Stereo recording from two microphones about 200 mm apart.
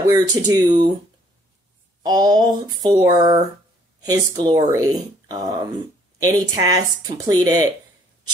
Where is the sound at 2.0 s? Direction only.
20° right (ahead or behind).